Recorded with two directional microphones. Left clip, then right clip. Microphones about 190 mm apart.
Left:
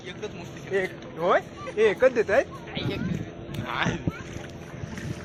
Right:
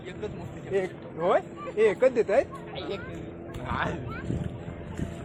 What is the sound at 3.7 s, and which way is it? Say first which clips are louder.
Boat: left 2 dB; 45° right (ahead or behind).